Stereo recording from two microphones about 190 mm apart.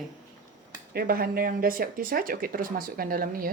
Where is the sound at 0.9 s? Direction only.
55° right (ahead or behind).